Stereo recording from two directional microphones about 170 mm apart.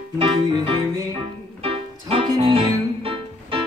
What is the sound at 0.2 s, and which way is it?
Music, 25° right (ahead or behind).